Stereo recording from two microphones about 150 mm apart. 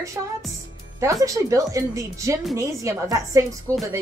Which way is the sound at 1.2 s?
20° right (ahead or behind).